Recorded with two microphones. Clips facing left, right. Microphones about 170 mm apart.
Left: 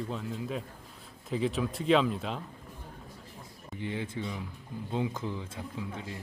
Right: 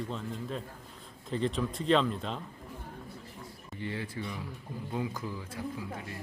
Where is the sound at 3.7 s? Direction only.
15° left (ahead or behind).